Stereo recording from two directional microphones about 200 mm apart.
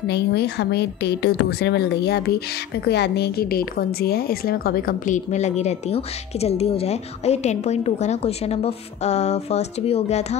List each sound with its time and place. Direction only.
0.0 s a woman's voice: 55° left (ahead or behind); by 10.2 s 30° left (ahead or behind)